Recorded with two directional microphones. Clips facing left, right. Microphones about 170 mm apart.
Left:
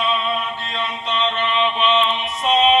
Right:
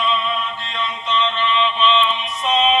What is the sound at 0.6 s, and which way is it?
Mantra, 45° left (ahead or behind).